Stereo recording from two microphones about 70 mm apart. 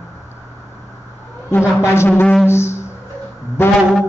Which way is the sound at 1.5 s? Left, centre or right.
Left.